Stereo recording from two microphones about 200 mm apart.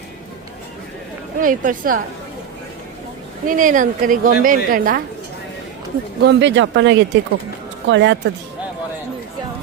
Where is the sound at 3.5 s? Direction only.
40° right (ahead or behind).